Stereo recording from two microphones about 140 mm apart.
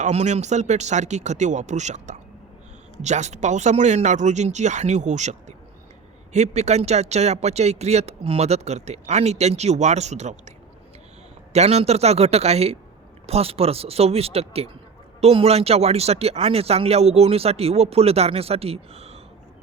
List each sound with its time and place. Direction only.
0.0 s speech: 55° right (ahead or behind)
11.5 s speech: 50° right (ahead or behind)